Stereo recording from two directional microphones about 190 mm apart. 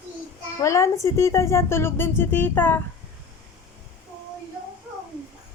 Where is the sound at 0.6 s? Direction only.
15° left (ahead or behind).